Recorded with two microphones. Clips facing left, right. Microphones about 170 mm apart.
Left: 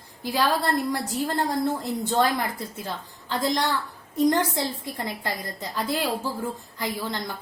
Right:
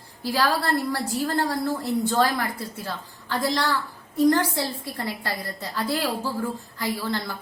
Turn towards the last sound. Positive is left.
turn(degrees=20)  # may be behind; listen again after turning